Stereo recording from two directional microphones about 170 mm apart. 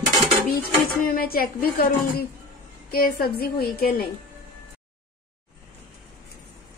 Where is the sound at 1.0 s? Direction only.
60° left (ahead or behind).